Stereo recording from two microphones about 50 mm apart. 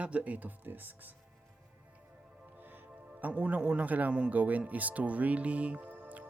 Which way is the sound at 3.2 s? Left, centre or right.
Right.